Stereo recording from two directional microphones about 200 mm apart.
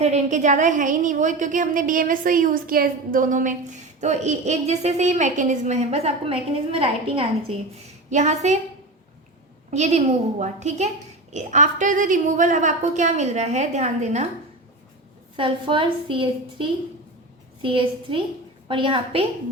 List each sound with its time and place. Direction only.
0.0 s a woman's voice: 35° right (ahead or behind)
9.7 s a woman's voice: 35° right (ahead or behind)
15.4 s a woman's voice: 25° right (ahead or behind)